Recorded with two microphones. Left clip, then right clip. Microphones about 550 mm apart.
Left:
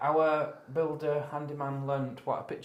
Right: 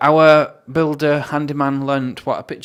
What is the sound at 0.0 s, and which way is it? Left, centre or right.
Speech, right.